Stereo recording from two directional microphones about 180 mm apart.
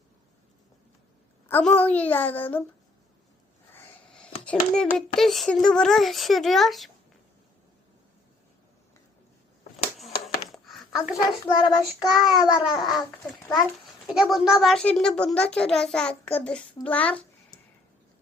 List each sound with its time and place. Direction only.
1.5 s a child's voice: 10° left (ahead or behind)
3.7 s sniff: 10° left (ahead or behind)
4.4 s a child's voice: 5° left (ahead or behind)
10.5 s a sound: centre (ahead or behind)
11.5 s child singing: 25° left (ahead or behind)
12.6 s a child's voice: centre (ahead or behind)
16.8 s a sound: 10° left (ahead or behind)